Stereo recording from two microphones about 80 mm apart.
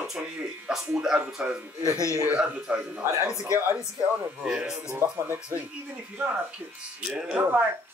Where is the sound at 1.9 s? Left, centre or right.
Left.